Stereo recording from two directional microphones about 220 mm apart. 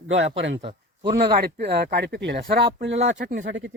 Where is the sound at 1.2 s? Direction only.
45° right (ahead or behind).